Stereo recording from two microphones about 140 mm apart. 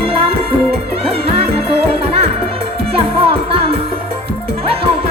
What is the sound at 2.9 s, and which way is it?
Music, 45° right (ahead or behind).